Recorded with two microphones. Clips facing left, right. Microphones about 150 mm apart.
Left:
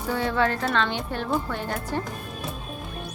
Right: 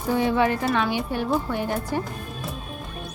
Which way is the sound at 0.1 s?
15° right (ahead or behind).